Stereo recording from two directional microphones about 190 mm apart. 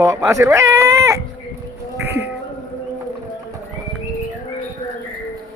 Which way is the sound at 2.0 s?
15° right (ahead or behind).